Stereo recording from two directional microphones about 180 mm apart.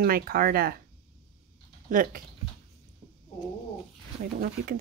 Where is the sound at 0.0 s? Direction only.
55° right (ahead or behind).